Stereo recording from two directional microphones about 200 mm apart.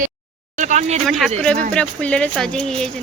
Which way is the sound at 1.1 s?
Centre (ahead or behind).